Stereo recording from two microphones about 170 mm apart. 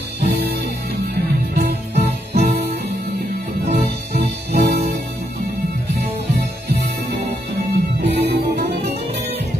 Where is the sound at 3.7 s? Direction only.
40° right (ahead or behind).